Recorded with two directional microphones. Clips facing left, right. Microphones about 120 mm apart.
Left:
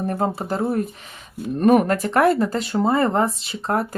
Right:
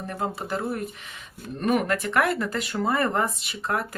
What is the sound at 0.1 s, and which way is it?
Speech, 40° left (ahead or behind).